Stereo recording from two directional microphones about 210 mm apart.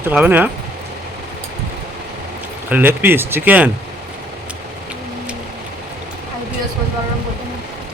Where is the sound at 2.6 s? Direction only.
10° right (ahead or behind).